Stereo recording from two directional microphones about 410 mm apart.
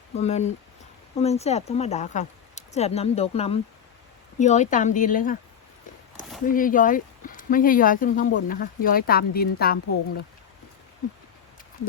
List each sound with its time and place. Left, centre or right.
0.2 s speech: centre
6.4 s speech: centre